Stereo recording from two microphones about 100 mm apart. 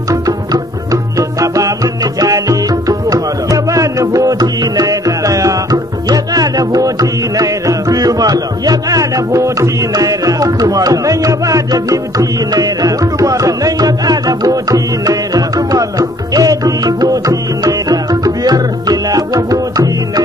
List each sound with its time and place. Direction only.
1.1 s music: 35° right (ahead or behind)